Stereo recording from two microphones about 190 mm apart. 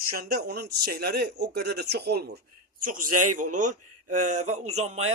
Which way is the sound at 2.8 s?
45° right (ahead or behind).